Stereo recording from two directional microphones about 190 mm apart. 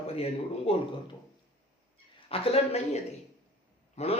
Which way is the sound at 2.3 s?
30° left (ahead or behind).